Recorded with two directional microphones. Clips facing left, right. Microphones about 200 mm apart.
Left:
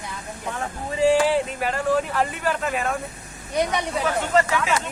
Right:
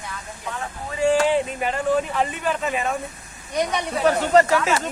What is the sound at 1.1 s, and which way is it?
Speech, 10° left (ahead or behind).